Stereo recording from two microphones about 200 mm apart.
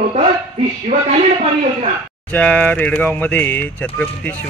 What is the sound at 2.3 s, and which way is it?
Speech, 5° left (ahead or behind).